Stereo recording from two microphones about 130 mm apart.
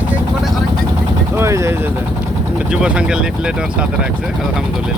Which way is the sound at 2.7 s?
5° right (ahead or behind).